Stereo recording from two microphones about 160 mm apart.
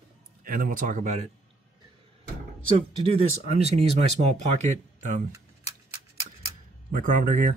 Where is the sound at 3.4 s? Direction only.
40° right (ahead or behind).